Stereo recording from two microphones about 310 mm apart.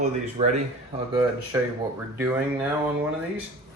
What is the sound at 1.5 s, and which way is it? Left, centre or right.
Speech, centre.